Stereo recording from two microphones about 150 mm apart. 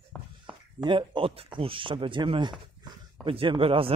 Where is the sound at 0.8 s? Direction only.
30° right (ahead or behind).